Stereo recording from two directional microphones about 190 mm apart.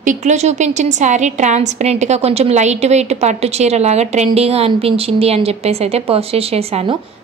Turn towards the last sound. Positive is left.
turn(degrees=-30)  # may be behind; listen again after turning